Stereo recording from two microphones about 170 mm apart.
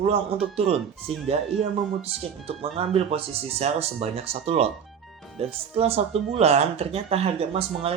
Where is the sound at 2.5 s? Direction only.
35° right (ahead or behind).